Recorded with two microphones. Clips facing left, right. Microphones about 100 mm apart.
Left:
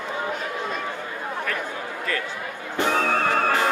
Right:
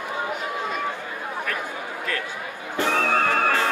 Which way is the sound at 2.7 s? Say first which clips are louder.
Even; 20° left (ahead or behind).